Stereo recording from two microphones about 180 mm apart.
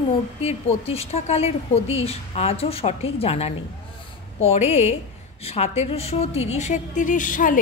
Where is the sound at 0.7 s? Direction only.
35° left (ahead or behind).